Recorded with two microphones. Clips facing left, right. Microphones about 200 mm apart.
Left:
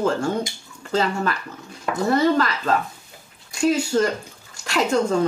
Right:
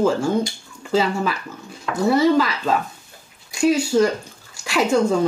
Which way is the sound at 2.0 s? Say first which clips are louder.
Right 3 dB; 10° right (ahead or behind).